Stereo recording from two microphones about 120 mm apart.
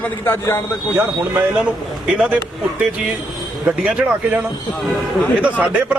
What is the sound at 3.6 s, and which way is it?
Speech, 10° right (ahead or behind).